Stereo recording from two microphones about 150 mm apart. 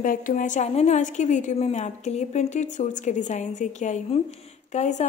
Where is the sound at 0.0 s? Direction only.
60° left (ahead or behind).